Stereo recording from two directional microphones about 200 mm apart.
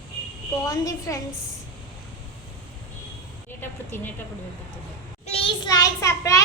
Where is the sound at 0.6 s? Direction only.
15° left (ahead or behind).